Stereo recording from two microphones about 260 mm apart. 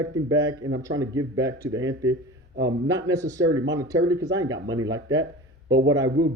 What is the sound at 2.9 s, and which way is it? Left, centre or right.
Speech, centre.